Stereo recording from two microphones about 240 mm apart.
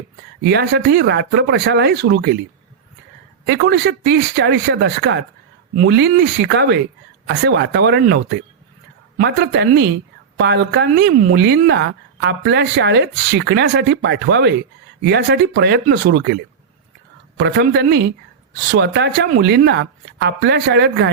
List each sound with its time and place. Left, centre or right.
0.4 s a woman's voice: right
3.4 s a woman's voice: right